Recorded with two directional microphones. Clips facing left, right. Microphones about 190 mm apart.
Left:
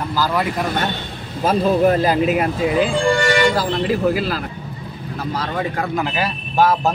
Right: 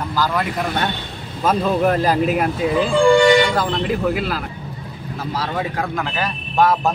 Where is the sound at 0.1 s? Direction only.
5° left (ahead or behind).